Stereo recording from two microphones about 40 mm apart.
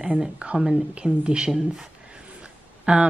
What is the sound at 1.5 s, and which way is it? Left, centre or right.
Speech, centre.